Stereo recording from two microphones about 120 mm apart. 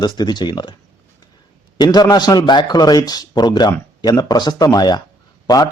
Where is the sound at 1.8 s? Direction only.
35° left (ahead or behind).